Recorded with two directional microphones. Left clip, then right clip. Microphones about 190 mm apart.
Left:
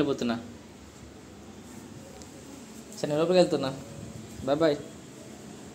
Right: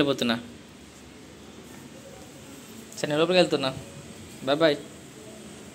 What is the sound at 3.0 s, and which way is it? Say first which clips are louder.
Speech: right 1 dB; centre (ahead or behind).